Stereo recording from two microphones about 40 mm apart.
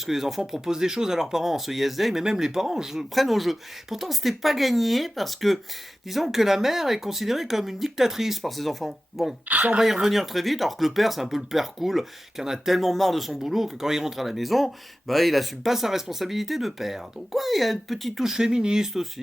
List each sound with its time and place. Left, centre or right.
0.0 s speech: centre
2.2 s speech: centre
9.5 s speech: right
9.8 s speech: centre
18.2 s speech: centre